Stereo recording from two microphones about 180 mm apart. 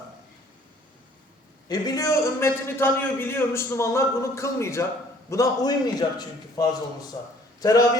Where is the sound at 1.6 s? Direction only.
20° left (ahead or behind).